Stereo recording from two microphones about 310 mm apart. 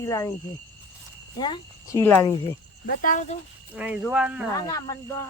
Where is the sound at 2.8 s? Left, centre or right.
Left.